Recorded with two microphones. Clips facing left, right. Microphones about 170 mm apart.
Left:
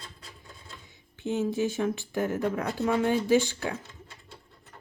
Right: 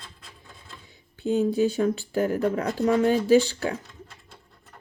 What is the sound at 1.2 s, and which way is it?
Speech, 15° right (ahead or behind).